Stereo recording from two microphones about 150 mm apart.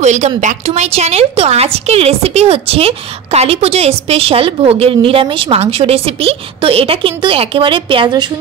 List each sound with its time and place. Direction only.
0.0 s a woman's voice: 50° right (ahead or behind); by 8.3 s 30° right (ahead or behind)